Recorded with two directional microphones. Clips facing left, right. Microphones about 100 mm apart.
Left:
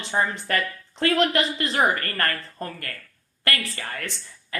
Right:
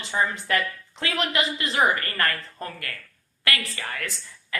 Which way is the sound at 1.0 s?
45° left (ahead or behind).